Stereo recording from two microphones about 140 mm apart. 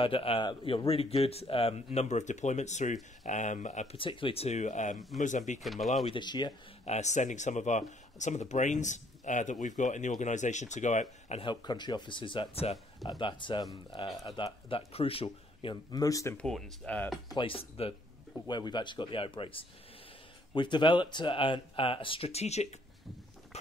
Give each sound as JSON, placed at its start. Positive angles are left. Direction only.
{"t": 0.0, "sound": "speech", "side_deg": 40}
{"t": 3.9, "sound": "speech", "side_deg": 40}
{"t": 5.6, "sound": "speech", "side_deg": 0}
{"t": 6.0, "sound": "speech", "side_deg": 35}
{"t": 6.9, "sound": "speech", "side_deg": 55}
{"t": 11.4, "sound": "speech", "side_deg": 30}
{"t": 16.3, "sound": "speech", "side_deg": 5}
{"t": 17.3, "sound": "speech", "side_deg": 40}
{"t": 18.5, "sound": "speech", "side_deg": 30}
{"t": 23.5, "sound": "patter", "side_deg": 50}